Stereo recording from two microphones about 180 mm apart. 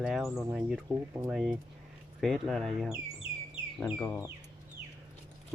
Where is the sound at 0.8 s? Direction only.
15° right (ahead or behind).